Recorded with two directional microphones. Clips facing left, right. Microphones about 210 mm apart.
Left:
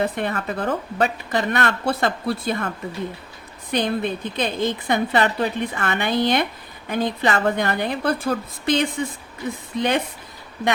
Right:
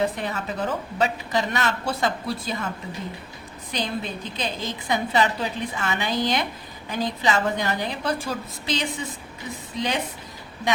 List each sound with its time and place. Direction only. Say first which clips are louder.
0.0 s a woman's voice: left 2 dB; 55° left (ahead or behind)
3.7 s a woman's voice: left 7 dB; 55° left (ahead or behind)